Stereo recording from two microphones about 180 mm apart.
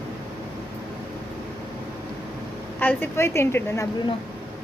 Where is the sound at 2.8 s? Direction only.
10° left (ahead or behind).